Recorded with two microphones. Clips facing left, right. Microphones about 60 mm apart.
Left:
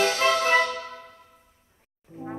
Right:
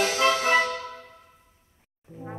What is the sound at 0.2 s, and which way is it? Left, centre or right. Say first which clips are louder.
Music: even; centre.